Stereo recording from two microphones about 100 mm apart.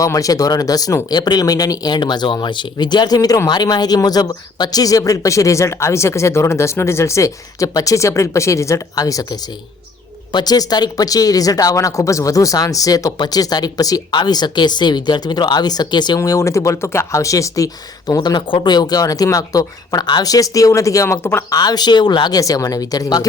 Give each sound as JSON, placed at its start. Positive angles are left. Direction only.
{"t": 0.0, "sound": "speech", "side_deg": 35}